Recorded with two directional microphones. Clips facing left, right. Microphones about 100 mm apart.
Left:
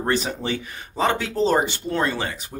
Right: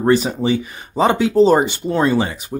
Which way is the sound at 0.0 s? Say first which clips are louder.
Right 8 dB; 10° right (ahead or behind).